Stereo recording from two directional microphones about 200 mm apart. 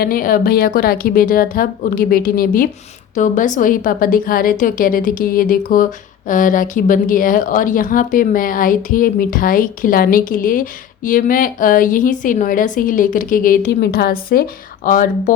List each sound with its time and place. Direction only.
0.0 s a woman's voice: 45° left (ahead or behind)